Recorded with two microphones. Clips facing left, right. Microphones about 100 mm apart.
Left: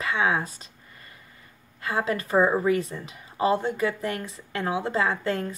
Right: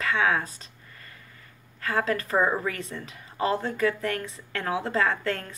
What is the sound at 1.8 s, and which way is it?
Speech, 15° left (ahead or behind).